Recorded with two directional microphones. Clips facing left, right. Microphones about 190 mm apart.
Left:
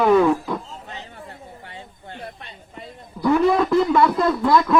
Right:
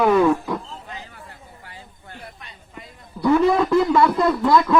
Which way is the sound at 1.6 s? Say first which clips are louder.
Left 4 dB; 25° left (ahead or behind).